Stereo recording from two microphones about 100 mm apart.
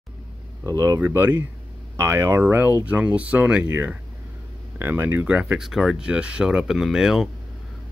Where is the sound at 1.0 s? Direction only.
20° right (ahead or behind); by 7.2 s 5° right (ahead or behind).